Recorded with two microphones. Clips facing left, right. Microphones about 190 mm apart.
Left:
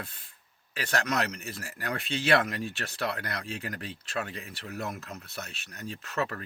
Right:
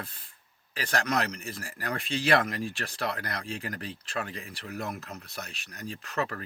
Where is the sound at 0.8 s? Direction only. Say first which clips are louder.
Right 1 dB; 30° right (ahead or behind).